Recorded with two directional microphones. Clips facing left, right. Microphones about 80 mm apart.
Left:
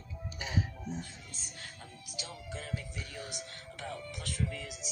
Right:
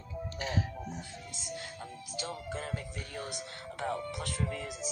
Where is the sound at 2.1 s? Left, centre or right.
Right.